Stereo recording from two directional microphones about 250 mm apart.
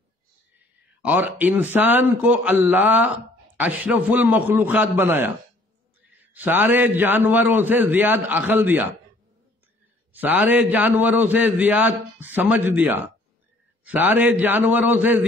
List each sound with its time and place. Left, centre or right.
1.0 s a man's voice: centre
10.1 s a man's voice: centre